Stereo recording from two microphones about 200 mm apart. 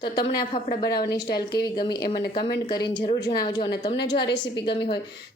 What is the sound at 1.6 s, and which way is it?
A woman's voice, 20° left (ahead or behind).